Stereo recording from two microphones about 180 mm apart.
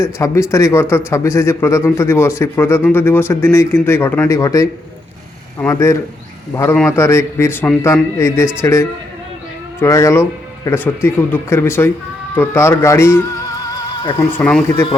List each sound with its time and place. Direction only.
0.0 s a man's voice: 15° left (ahead or behind)
14.3 s a man's voice: 10° left (ahead or behind)